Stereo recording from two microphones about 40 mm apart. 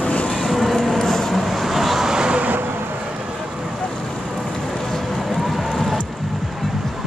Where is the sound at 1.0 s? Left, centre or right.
Centre.